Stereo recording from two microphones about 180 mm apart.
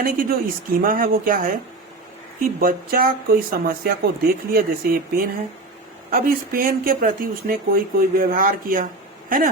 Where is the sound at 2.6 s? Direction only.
55° right (ahead or behind).